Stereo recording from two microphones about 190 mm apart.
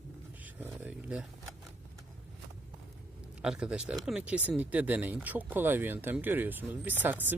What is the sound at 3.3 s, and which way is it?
Speech, 5° right (ahead or behind).